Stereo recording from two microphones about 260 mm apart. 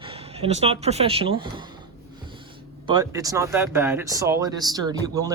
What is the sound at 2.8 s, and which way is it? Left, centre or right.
Speech, centre.